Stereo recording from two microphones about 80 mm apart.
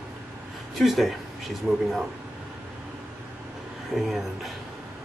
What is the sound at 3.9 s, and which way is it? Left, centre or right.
Speech, centre.